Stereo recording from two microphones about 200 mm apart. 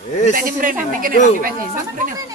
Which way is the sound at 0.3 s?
45° right (ahead or behind).